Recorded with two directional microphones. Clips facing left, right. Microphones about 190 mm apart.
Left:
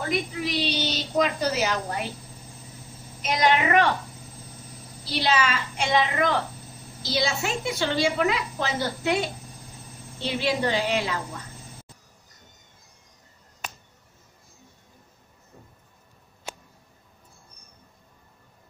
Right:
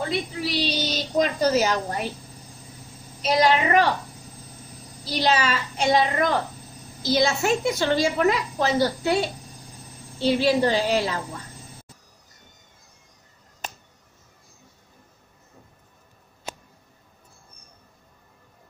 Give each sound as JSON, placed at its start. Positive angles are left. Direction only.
{"t": 0.4, "sound": "speech", "side_deg": -40}
{"t": 3.2, "sound": "speech", "side_deg": -30}
{"t": 5.1, "sound": "a woman's voice", "side_deg": -40}
{"t": 10.2, "sound": "speech", "side_deg": -35}